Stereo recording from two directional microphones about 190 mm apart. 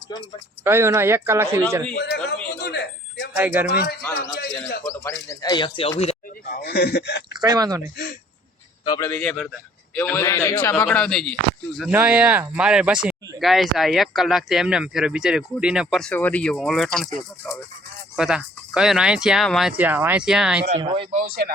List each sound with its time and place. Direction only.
0.6 s speech: 15° right (ahead or behind)
2.0 s a sound: 60° left (ahead or behind)
3.3 s speech: 10° right (ahead or behind)
3.7 s speech: 55° left (ahead or behind)
4.2 s bird: 55° left (ahead or behind)
4.9 s speech: 15° left (ahead or behind)
6.5 s speech: 55° left (ahead or behind)
7.3 s speech: 20° right (ahead or behind)
8.8 s a man's voice: 20° left (ahead or behind)
9.2 s a man's voice: centre (ahead or behind)
11.8 s speech: 10° right (ahead or behind)
20.7 s speech: 25° right (ahead or behind)
21.2 s speech: 55° right (ahead or behind)